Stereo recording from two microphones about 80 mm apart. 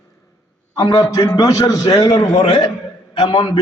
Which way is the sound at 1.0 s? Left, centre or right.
Left.